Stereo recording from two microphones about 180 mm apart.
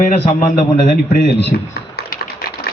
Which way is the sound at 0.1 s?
50° left (ahead or behind).